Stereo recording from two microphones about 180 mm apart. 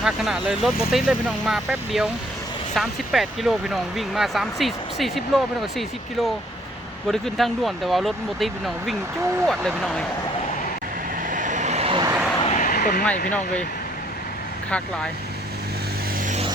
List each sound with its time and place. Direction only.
0.0 s speech: centre (ahead or behind)
7.1 s speech: centre (ahead or behind)
11.3 s vehicle: 45° right (ahead or behind); by 12.1 s 30° right (ahead or behind)
12.4 s a sound: 35° left (ahead or behind)
12.6 s a sound: 60° left (ahead or behind)
13.3 s speech: 5° left (ahead or behind)
16.2 s music: 40° right (ahead or behind)